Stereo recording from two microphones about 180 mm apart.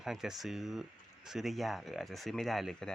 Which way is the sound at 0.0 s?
Centre (ahead or behind).